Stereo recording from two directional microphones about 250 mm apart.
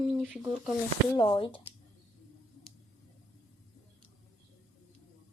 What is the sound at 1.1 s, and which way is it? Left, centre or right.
Speech, centre.